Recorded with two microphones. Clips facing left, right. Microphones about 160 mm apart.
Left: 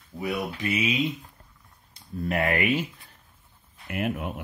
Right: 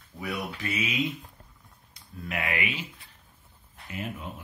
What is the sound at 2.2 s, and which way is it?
Speech, 40° left (ahead or behind).